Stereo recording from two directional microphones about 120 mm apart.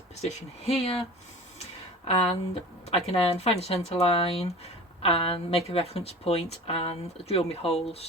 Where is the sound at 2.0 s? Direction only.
60° left (ahead or behind).